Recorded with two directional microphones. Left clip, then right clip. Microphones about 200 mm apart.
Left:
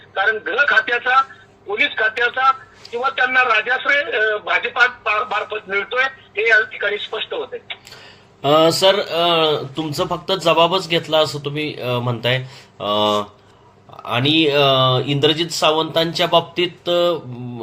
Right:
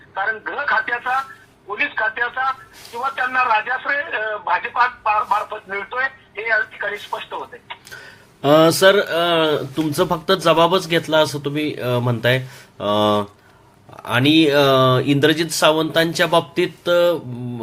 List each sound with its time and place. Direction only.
0.3 s speech: 20° left (ahead or behind)
8.4 s speech: 40° right (ahead or behind)